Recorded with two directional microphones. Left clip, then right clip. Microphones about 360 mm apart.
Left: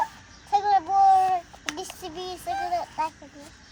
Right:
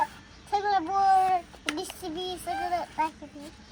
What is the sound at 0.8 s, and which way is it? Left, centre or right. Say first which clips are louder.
Child singing: left 3 dB; left.